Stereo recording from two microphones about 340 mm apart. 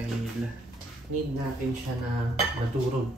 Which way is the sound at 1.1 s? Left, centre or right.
Right.